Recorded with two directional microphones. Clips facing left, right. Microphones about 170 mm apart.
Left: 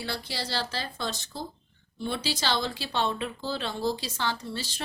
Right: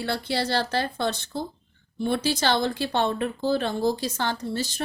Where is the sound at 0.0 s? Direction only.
60° right (ahead or behind).